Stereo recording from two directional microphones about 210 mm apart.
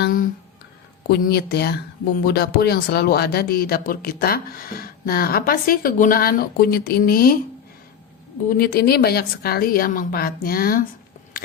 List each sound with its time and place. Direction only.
0.0 s a sound: 40° left (ahead or behind)
1.0 s speech: 50° left (ahead or behind)
8.4 s speech: 45° left (ahead or behind)